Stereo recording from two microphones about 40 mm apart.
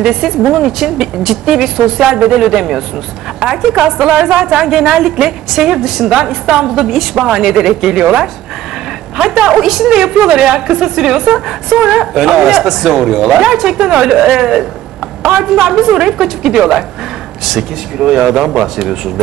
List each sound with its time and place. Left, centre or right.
0.0 s a woman's voice: centre
6.0 s speech: centre
9.4 s speech: centre
17.9 s speech: centre